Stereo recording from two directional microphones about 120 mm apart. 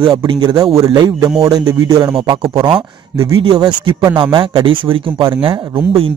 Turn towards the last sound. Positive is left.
turn(degrees=-45)  # may be behind; listen again after turning